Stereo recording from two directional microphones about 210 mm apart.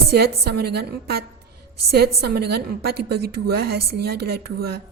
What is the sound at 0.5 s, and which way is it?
A woman's voice, 50° right (ahead or behind).